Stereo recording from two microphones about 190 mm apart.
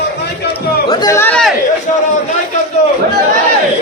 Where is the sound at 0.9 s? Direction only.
20° left (ahead or behind).